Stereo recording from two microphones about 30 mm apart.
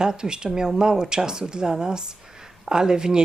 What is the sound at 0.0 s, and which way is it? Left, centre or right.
Speech, right.